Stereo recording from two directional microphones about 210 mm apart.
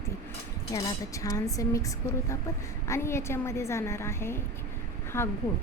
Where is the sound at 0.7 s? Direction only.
15° left (ahead or behind).